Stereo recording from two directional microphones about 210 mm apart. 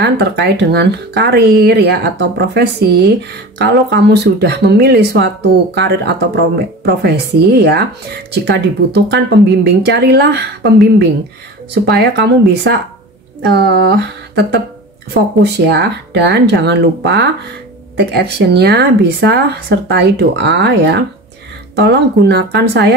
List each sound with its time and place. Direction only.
0.0 s speech: 55° right (ahead or behind)